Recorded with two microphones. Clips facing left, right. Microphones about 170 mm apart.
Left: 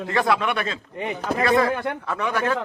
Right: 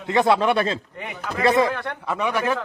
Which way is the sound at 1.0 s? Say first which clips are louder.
Left 5 dB; 30° left (ahead or behind).